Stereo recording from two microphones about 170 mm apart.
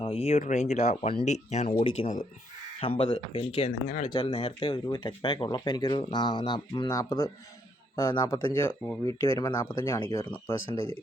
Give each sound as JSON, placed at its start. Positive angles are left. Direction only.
{"t": 0.0, "sound": "speech", "side_deg": 35}
{"t": 3.8, "sound": "speech", "side_deg": 45}
{"t": 4.1, "sound": "speech", "side_deg": 30}